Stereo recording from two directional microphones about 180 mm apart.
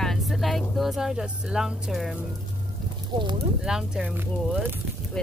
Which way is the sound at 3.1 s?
25° right (ahead or behind).